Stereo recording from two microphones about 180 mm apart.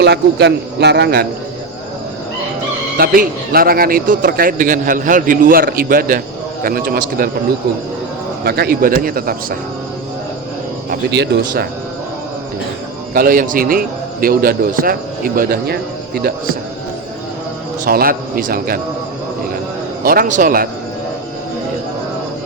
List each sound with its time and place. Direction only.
0.0 s speech: 70° right (ahead or behind)
3.0 s a man's voice: 55° right (ahead or behind)
8.4 s a man's voice: 60° right (ahead or behind)
10.8 s speech: 70° right (ahead or behind)
13.1 s a man's voice: 50° right (ahead or behind)
17.8 s a man's voice: 55° right (ahead or behind)
20.0 s a man's voice: 55° right (ahead or behind)